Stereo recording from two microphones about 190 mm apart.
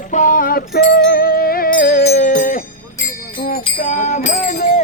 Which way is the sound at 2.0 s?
40° left (ahead or behind).